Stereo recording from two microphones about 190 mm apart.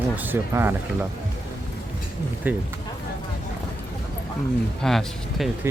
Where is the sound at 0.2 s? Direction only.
10° right (ahead or behind).